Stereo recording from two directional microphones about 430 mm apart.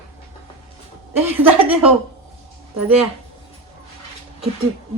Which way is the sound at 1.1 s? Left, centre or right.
Centre.